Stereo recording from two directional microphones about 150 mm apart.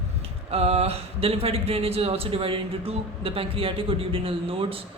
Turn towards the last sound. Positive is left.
turn(degrees=-40)  # may be behind; listen again after turning